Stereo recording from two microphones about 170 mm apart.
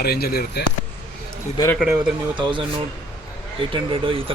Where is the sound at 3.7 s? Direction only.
30° right (ahead or behind).